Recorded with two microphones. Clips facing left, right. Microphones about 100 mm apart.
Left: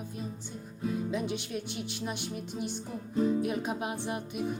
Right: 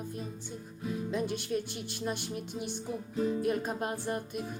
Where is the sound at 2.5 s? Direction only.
50° left (ahead or behind).